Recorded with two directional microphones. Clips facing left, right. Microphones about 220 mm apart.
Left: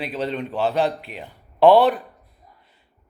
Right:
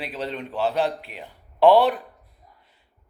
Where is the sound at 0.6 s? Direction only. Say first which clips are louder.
Left 2 dB; 5° right (ahead or behind).